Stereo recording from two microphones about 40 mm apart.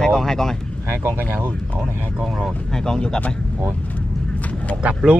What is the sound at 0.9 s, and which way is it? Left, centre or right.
Speech, right.